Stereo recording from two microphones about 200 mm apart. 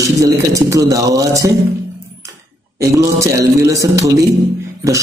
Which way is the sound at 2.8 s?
15° right (ahead or behind).